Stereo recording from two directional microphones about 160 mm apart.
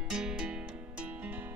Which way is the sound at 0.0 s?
5° right (ahead or behind).